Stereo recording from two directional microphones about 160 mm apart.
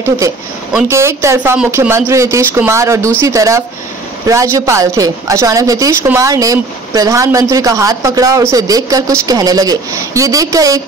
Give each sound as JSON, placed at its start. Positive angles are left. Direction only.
{"t": 0.8, "sound": "a woman's voice", "side_deg": -15}